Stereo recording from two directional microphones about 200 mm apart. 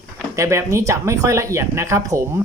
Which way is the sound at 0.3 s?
15° right (ahead or behind).